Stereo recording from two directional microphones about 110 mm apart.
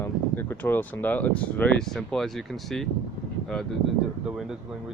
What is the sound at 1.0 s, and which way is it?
Speech, 15° left (ahead or behind).